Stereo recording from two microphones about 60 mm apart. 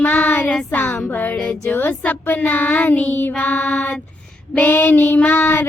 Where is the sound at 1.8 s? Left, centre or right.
Left.